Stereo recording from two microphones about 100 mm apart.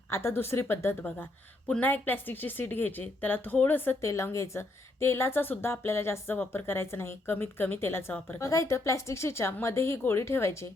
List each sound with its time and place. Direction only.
0.1 s a woman's voice: 25° left (ahead or behind)